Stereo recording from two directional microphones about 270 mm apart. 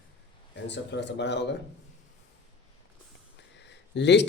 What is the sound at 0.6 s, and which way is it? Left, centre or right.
Speech, left.